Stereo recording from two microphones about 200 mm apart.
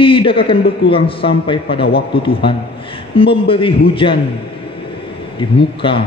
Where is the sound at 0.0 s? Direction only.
25° left (ahead or behind).